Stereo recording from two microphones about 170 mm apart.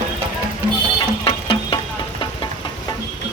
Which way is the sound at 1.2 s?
30° left (ahead or behind).